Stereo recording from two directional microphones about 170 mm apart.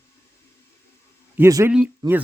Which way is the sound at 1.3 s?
15° right (ahead or behind).